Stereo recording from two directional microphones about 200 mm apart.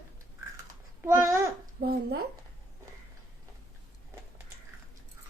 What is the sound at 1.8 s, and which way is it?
Speech, 50° right (ahead or behind).